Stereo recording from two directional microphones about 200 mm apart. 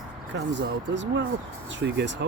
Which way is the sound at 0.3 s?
60° right (ahead or behind).